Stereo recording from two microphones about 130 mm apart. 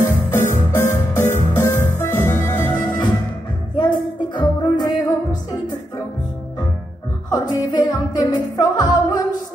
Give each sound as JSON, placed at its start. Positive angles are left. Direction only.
{"t": 0.0, "sound": "music", "side_deg": 15}
{"t": 3.7, "sound": "music", "side_deg": 35}
{"t": 7.2, "sound": "music", "side_deg": 35}